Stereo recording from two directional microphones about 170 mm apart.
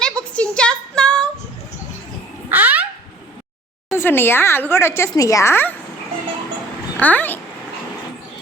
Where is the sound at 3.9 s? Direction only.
15° left (ahead or behind).